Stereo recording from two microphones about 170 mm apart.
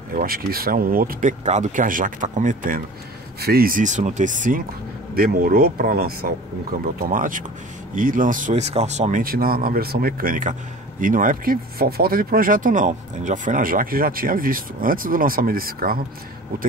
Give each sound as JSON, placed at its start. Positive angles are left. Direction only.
{"t": 0.1, "sound": "speech", "side_deg": -55}
{"t": 3.3, "sound": "speech", "side_deg": -65}
{"t": 5.1, "sound": "speech", "side_deg": -60}
{"t": 9.2, "sound": "speech", "side_deg": -60}